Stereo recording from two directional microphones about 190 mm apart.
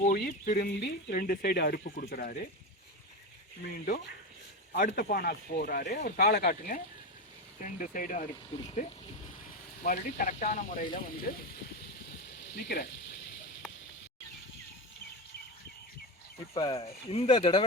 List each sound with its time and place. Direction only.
0.0 s speech: 50° left (ahead or behind)
4.7 s speech: 45° left (ahead or behind)
12.3 s a sound: 65° left (ahead or behind)
16.6 s speech: 25° left (ahead or behind)
16.8 s speech: 35° left (ahead or behind)